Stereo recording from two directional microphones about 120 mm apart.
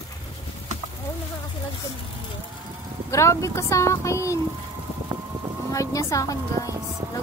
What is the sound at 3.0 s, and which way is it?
Speech, 25° left (ahead or behind).